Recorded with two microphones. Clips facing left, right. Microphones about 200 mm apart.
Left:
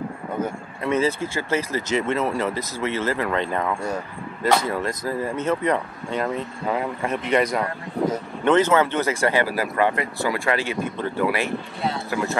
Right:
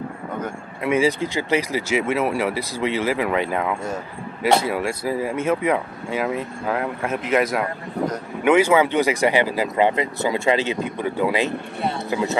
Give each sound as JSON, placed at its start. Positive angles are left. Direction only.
{"t": 0.8, "sound": "speech", "side_deg": -10}